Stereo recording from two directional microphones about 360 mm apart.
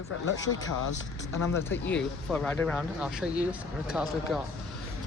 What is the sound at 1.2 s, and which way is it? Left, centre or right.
Speech, centre.